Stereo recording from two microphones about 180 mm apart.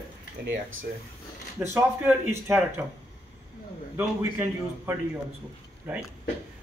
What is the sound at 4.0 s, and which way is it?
Speech, 15° right (ahead or behind).